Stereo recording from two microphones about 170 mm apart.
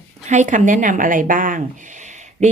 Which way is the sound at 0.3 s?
45° right (ahead or behind).